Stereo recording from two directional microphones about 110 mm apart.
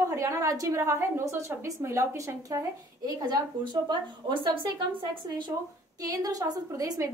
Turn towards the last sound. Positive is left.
turn(degrees=-35)  # may be behind; listen again after turning